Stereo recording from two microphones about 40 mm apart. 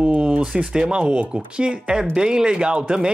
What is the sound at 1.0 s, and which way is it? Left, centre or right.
Speech, right.